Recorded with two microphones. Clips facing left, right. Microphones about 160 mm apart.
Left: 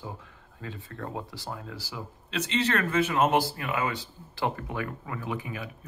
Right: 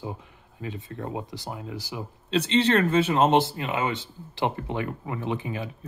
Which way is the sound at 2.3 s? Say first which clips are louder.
Right 6 dB; 30° right (ahead or behind).